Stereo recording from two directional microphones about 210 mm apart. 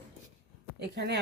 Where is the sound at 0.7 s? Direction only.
50° right (ahead or behind).